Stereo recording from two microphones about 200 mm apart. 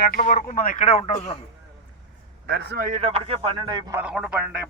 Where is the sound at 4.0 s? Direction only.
5° right (ahead or behind).